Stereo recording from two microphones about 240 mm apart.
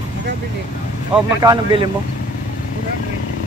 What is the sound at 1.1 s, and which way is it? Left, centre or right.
Speech, centre.